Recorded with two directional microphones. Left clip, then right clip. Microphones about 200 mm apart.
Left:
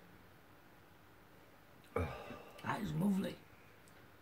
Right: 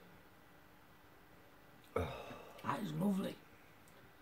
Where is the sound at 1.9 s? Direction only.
10° right (ahead or behind).